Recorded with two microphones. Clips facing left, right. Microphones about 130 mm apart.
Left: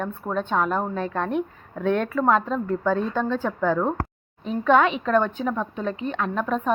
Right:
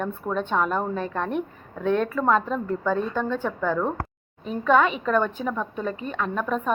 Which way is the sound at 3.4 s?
15° left (ahead or behind).